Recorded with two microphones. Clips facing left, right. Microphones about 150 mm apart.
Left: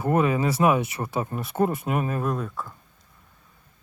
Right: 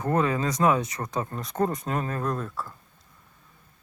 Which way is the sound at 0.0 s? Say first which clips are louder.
Left 3 dB; 10° left (ahead or behind).